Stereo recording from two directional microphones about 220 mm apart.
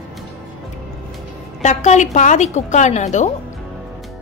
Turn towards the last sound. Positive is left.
turn(degrees=30)  # may be behind; listen again after turning